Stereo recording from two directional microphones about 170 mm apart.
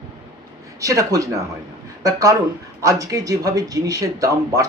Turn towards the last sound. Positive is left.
turn(degrees=-20)  # may be behind; listen again after turning